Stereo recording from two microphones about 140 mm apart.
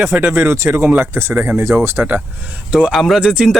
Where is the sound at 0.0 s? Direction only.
15° right (ahead or behind).